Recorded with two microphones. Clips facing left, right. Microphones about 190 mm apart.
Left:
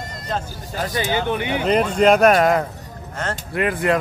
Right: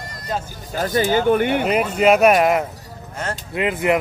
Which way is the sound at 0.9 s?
45° right (ahead or behind).